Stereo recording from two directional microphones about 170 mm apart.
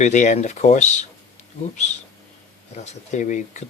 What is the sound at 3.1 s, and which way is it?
Speech, 45° left (ahead or behind).